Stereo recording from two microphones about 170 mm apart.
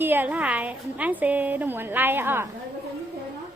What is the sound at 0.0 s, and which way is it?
A woman's voice, 10° right (ahead or behind).